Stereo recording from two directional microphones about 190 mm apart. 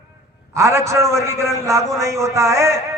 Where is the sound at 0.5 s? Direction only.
15° right (ahead or behind).